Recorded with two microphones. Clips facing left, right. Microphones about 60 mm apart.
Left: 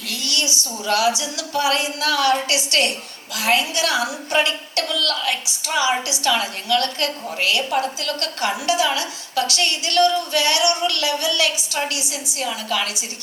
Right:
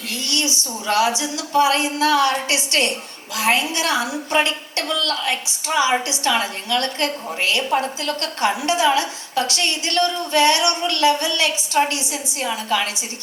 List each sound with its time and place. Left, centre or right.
0.1 s a woman's voice: right